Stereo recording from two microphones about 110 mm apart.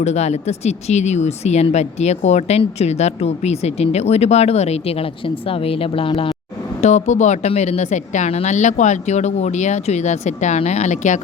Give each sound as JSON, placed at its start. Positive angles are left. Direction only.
{"t": 0.0, "sound": "speech", "side_deg": 90}
{"t": 6.8, "sound": "speech", "side_deg": 90}